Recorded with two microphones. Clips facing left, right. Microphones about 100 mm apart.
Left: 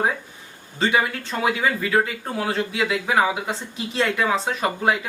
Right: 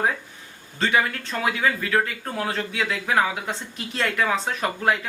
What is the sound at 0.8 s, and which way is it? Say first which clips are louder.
Speech: left 1 dB; 10° left (ahead or behind).